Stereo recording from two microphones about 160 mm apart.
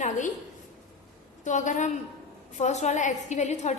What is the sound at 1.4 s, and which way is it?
A woman's voice, 50° left (ahead or behind).